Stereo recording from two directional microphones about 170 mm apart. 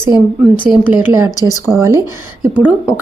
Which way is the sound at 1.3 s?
20° left (ahead or behind).